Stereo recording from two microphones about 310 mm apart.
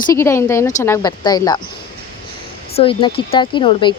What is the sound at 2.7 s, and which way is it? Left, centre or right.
Speech, centre.